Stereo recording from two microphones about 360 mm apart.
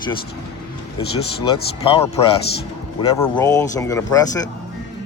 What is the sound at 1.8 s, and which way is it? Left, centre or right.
Speech, centre.